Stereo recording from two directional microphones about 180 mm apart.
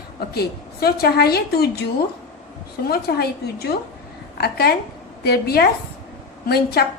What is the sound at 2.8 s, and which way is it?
A woman's voice, 60° left (ahead or behind).